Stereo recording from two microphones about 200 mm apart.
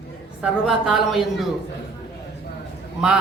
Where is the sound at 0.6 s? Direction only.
Centre (ahead or behind).